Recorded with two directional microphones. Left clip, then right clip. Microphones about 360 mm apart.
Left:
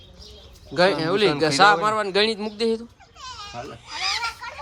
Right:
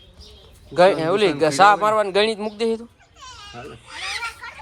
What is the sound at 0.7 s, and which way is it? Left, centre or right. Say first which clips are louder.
Speech: right 4 dB; centre.